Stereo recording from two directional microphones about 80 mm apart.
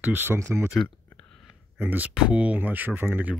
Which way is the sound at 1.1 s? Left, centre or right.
Centre.